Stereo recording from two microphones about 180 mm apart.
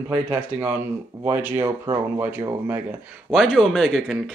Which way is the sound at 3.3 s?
Centre (ahead or behind).